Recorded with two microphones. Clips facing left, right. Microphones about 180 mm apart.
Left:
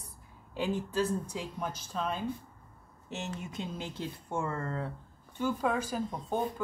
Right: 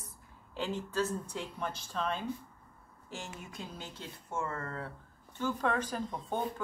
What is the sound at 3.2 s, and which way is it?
Speech, 25° left (ahead or behind).